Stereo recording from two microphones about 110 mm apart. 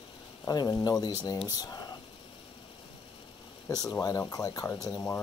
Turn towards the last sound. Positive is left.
turn(degrees=30)  # may be behind; listen again after turning